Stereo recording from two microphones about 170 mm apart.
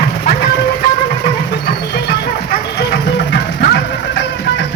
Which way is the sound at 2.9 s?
85° left.